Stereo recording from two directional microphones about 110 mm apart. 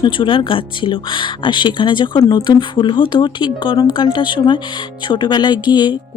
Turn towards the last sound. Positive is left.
turn(degrees=45)  # may be behind; listen again after turning